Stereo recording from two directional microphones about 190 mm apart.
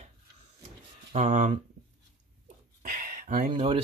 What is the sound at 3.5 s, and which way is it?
Speech, 30° right (ahead or behind).